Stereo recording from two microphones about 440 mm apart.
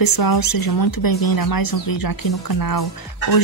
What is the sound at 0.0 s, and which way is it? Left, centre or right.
Speech, left.